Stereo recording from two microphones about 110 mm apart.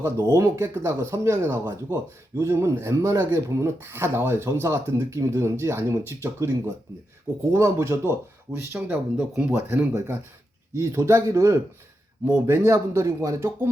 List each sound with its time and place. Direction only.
0.0 s speech: 25° right (ahead or behind)
9.1 s speech: 5° right (ahead or behind)
9.5 s speech: 20° right (ahead or behind)